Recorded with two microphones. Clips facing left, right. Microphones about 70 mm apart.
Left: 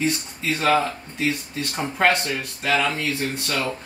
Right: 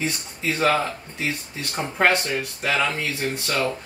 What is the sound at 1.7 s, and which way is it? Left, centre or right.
Speech, centre.